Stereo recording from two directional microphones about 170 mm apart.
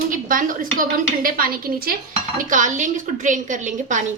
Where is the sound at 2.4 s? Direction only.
50° right (ahead or behind).